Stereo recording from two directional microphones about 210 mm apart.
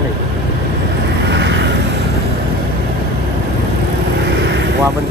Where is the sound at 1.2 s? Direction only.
55° right (ahead or behind).